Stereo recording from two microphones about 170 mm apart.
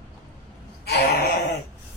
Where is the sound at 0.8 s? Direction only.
70° left (ahead or behind).